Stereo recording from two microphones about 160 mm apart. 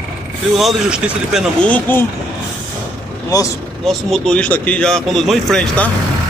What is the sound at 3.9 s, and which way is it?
Speech, centre (ahead or behind).